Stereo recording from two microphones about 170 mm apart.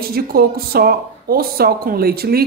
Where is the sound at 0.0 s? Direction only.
65° right (ahead or behind).